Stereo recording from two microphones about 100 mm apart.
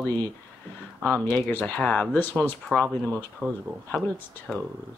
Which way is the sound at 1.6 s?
15° left (ahead or behind).